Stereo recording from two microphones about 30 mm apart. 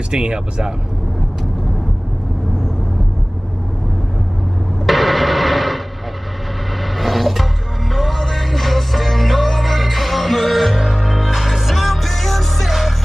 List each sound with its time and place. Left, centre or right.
0.1 s speech: right
4.8 s music: centre
7.0 s music: centre
12.6 s music: centre